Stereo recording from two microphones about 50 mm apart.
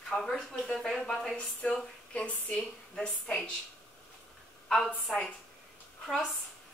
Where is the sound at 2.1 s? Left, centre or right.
Left.